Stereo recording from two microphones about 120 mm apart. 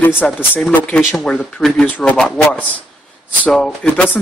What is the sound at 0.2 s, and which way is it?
Speech, 10° left (ahead or behind).